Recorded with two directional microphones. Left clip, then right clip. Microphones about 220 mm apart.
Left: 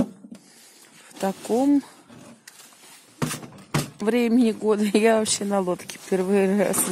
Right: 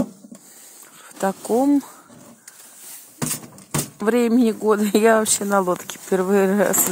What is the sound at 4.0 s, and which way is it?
Speech, 5° right (ahead or behind).